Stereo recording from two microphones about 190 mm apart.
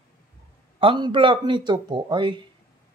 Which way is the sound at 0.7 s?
25° right (ahead or behind).